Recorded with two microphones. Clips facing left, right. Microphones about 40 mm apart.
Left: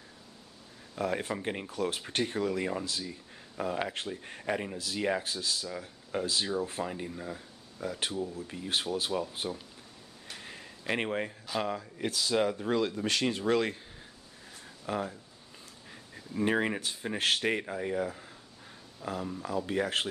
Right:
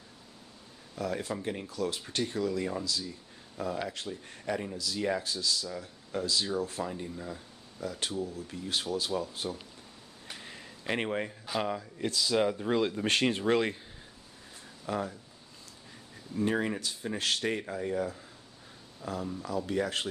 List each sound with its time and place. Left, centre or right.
0.9 s speech: left; by 8.4 s centre
8.4 s speech: left
10.3 s a sound: centre
11.5 s speech: centre
12.0 s speech: centre
12.4 s speech: centre
12.7 s speech: centre
13.0 s speech: right
13.4 s speech: centre
14.9 s speech: centre
15.9 s speech: left
19.4 s speech: left